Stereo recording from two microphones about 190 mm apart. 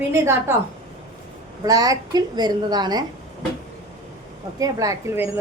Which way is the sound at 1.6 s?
20° right (ahead or behind).